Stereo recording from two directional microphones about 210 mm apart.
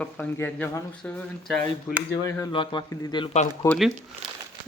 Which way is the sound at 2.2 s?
15° left (ahead or behind).